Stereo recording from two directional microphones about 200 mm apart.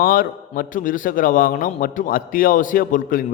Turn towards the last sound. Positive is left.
turn(degrees=40)  # may be behind; listen again after turning